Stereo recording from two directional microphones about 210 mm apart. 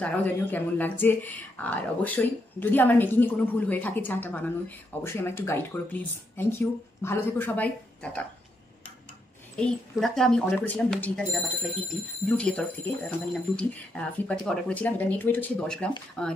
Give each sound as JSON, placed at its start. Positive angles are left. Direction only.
{"t": 0.0, "sound": "speech", "side_deg": 10}
{"t": 9.6, "sound": "speech", "side_deg": 0}